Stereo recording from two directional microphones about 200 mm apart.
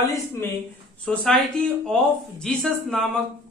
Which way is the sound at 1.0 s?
5° left (ahead or behind).